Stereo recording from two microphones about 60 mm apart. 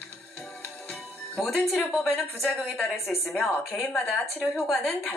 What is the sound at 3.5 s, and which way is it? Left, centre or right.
Speech, left.